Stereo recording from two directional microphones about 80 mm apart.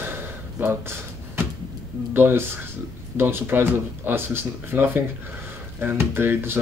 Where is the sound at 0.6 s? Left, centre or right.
Right.